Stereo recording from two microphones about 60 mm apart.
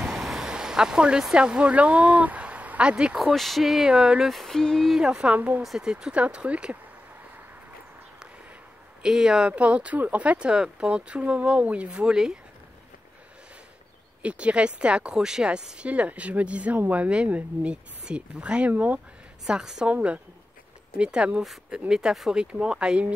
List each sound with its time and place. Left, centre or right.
0.0 s vehicle: centre
1.3 s speech: centre
3.3 s speech: centre
4.3 s a sound: centre
4.9 s speech: centre
5.6 s speech: centre; by 6.8 s right
9.0 s speech: centre
9.5 s speech: right
14.2 s speech: centre
19.4 s speech: centre
19.9 s speech: right